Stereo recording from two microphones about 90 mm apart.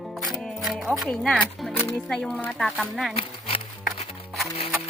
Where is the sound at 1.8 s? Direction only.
25° left (ahead or behind).